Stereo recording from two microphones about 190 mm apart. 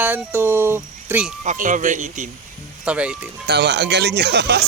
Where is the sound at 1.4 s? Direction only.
45° right (ahead or behind).